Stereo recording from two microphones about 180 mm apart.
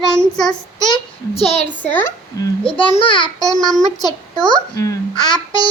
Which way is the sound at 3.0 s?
30° left (ahead or behind).